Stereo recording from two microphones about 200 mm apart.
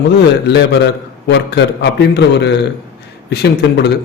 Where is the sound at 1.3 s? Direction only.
60° left (ahead or behind).